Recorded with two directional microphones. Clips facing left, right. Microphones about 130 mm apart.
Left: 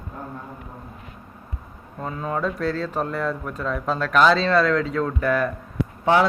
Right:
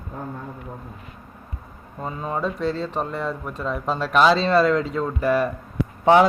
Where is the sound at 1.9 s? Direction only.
10° right (ahead or behind).